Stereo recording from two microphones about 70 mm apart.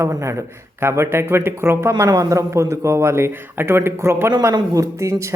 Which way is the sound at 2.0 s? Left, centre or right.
Right.